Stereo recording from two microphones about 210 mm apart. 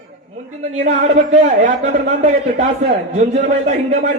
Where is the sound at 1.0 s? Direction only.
35° right (ahead or behind).